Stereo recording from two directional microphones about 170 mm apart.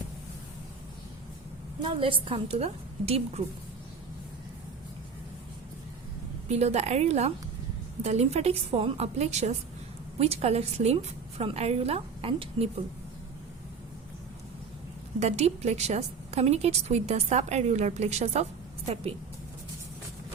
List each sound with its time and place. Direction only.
1.8 s a woman's voice: 30° right (ahead or behind)
6.5 s a woman's voice: 40° right (ahead or behind)
15.2 s a woman's voice: 40° right (ahead or behind)